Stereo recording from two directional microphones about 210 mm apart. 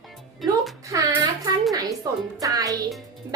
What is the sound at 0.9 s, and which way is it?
Speech, 15° right (ahead or behind).